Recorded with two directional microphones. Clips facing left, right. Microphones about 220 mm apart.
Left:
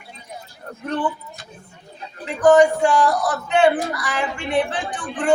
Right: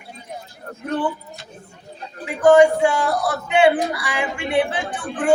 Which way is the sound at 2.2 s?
10° right (ahead or behind).